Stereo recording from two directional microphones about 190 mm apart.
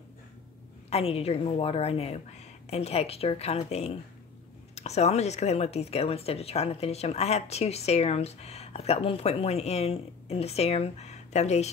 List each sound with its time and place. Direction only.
0.8 s speech: 30° left (ahead or behind)